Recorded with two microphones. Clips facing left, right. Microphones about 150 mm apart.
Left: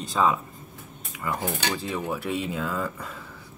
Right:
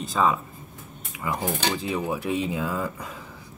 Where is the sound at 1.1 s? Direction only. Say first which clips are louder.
Right 1 dB; 15° right (ahead or behind).